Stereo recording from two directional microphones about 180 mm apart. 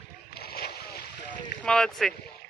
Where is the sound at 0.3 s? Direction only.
60° left (ahead or behind).